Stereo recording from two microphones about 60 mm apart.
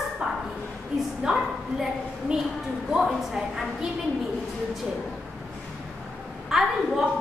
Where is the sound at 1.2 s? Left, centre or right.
Centre.